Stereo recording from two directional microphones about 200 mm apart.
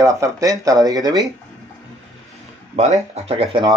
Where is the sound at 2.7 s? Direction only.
35° right (ahead or behind).